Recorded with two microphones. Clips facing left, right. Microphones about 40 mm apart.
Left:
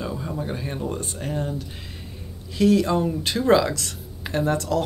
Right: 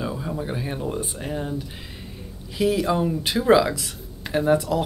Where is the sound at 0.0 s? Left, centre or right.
Centre.